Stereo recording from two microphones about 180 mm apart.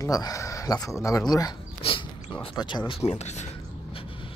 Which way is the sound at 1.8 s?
30° left (ahead or behind).